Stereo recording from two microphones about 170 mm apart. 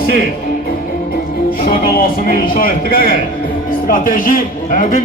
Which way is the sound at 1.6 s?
60° left (ahead or behind).